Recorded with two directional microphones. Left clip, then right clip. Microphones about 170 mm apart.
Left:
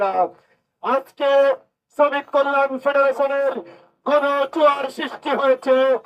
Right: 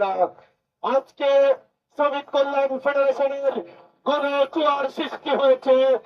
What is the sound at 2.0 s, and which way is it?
Speech, 25° right (ahead or behind).